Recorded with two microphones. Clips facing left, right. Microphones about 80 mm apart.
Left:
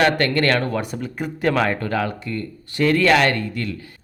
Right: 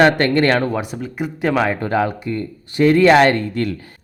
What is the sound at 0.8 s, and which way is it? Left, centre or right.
Speech, centre.